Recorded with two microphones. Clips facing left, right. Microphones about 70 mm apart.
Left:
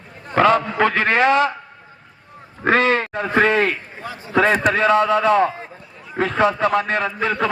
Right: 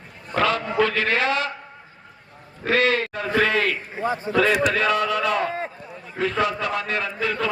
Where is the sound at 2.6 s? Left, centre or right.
Left.